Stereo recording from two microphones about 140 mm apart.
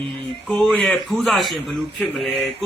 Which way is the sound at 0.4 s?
5° left (ahead or behind).